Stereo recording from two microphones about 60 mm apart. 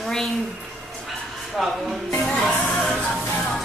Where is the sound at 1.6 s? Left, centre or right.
Centre.